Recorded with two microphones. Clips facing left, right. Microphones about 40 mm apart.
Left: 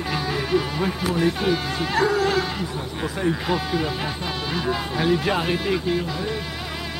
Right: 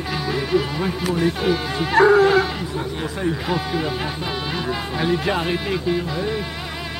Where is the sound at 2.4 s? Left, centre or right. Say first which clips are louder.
Right 2 dB; centre.